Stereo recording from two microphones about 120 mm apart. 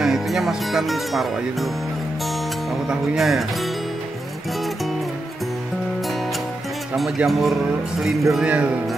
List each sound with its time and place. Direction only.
0.0 s music: centre (ahead or behind)
2.7 s speech: centre (ahead or behind)
7.0 s speech: centre (ahead or behind)
8.3 s music: 5° right (ahead or behind)